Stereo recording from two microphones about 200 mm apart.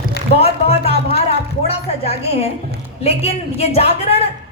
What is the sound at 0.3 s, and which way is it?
Music, 30° left (ahead or behind).